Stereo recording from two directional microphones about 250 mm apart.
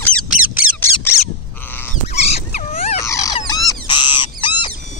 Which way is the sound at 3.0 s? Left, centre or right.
Centre.